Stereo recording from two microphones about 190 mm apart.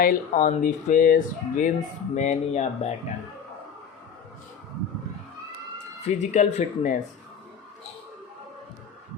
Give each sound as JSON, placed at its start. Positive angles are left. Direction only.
{"t": 0.0, "sound": "speech", "side_deg": 45}
{"t": 6.1, "sound": "speech", "side_deg": 40}